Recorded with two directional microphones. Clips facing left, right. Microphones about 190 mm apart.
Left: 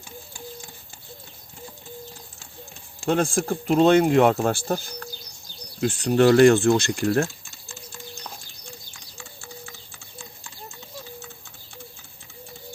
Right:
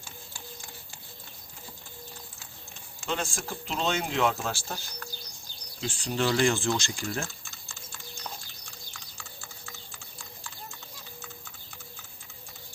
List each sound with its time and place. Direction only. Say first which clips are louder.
3.1 s speech: left 11 dB; 55° left (ahead or behind)
5.8 s speech: left 11 dB; 60° left (ahead or behind)